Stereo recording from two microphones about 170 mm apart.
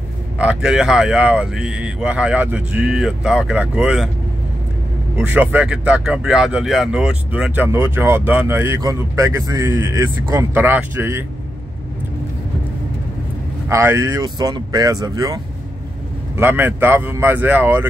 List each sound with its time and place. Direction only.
0.4 s speech: 5° right (ahead or behind)
5.1 s speech: 10° right (ahead or behind)
13.7 s speech: 15° right (ahead or behind)